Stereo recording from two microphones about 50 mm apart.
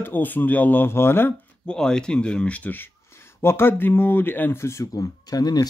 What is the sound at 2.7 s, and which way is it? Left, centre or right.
Speech, left.